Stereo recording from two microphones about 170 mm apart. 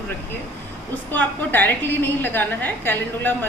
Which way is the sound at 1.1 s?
10° left (ahead or behind).